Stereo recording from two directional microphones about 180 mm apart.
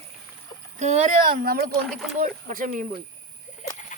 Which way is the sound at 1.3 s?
55° right (ahead or behind).